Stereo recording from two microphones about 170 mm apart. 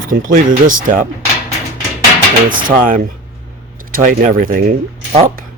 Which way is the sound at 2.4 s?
55° right (ahead or behind).